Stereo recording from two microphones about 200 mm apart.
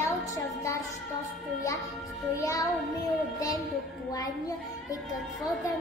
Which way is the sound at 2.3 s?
15° left (ahead or behind).